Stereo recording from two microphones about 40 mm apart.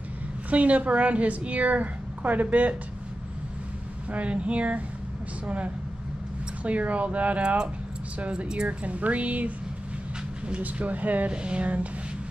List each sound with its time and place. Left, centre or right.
0.5 s a woman's voice: right
4.1 s a woman's voice: right
6.6 s a woman's voice: right
8.6 s a woman's voice: right
10.6 s speech: right
11.2 s a woman's voice: right